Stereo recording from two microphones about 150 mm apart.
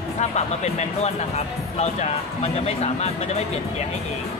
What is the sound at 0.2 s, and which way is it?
Speech, 50° left (ahead or behind).